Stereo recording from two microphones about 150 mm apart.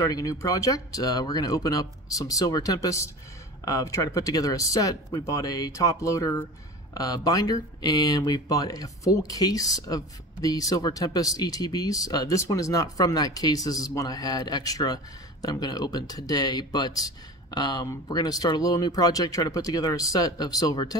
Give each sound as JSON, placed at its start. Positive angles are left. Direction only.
{"t": 0.0, "sound": "speech", "side_deg": 25}